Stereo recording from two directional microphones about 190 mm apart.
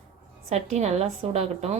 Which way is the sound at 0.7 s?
35° right (ahead or behind).